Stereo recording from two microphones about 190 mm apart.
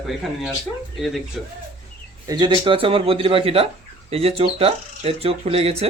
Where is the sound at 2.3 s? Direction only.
25° right (ahead or behind).